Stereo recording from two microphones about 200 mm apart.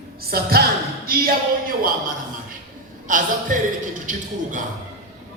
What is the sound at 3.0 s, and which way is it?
Speech, 40° right (ahead or behind).